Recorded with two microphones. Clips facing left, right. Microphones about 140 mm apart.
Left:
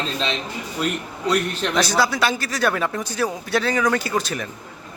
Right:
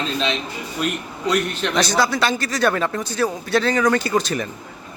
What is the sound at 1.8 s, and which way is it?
Speech, 5° left (ahead or behind).